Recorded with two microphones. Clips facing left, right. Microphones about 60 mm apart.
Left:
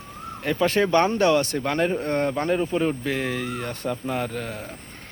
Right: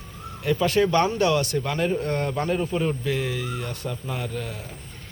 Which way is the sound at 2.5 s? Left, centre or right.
Centre.